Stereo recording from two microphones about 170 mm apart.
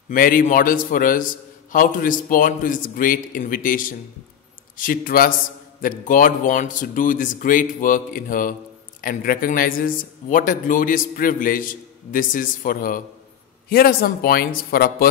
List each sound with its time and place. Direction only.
0.1 s a man's voice: 55° left (ahead or behind)